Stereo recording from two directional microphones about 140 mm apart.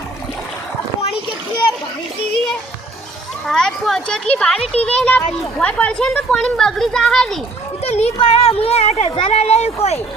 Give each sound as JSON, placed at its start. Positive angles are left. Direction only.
{"t": 3.4, "sound": "speech", "side_deg": 0}
{"t": 7.9, "sound": "speech", "side_deg": 50}